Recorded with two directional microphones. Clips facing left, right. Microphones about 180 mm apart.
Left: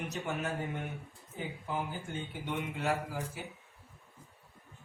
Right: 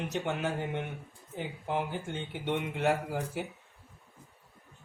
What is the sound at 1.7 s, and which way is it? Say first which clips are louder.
A man's voice: right 5 dB; 75° right (ahead or behind).